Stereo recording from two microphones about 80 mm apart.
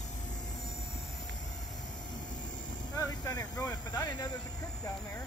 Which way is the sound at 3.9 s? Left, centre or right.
Left.